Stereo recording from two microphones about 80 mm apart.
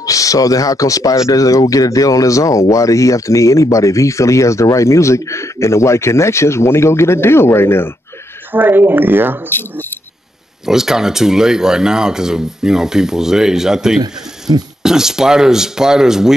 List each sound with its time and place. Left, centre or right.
0.0 s speech: left
8.5 s speech: right
10.6 s speech: centre